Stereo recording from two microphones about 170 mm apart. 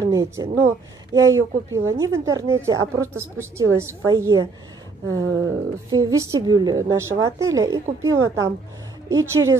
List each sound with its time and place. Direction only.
0.0 s a woman's voice: 20° right (ahead or behind)